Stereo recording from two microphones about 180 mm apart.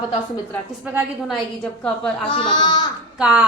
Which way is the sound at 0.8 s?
10° right (ahead or behind).